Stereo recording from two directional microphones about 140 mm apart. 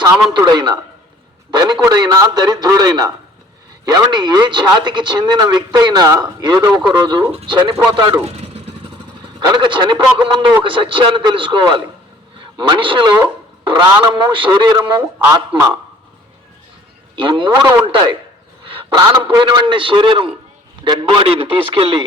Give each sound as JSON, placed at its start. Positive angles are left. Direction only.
{"t": 0.3, "sound": "a man's voice", "side_deg": -30}
{"t": 8.4, "sound": "vehicle", "side_deg": -45}
{"t": 9.4, "sound": "speech", "side_deg": -30}
{"t": 15.5, "sound": "a man's voice", "side_deg": -20}
{"t": 17.2, "sound": "speech", "side_deg": -35}